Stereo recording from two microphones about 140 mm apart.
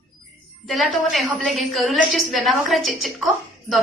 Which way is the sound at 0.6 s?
Centre (ahead or behind).